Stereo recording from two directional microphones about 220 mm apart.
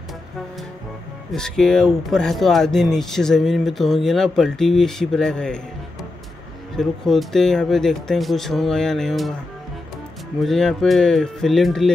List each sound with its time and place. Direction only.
1.3 s speech: 5° left (ahead or behind)
6.8 s speech: centre (ahead or behind)
10.4 s speech: centre (ahead or behind)